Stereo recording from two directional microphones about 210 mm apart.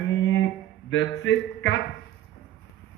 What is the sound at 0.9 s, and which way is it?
Speech, 60° left (ahead or behind).